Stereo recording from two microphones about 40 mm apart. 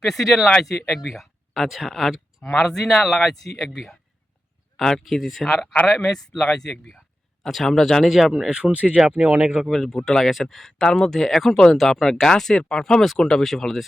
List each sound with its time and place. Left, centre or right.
0.0 s speech: centre
1.1 s speech: centre
2.6 s speech: centre
4.8 s speech: centre
8.0 s speech: centre
8.4 s speech: centre
9.0 s speech: right
9.7 s speech: centre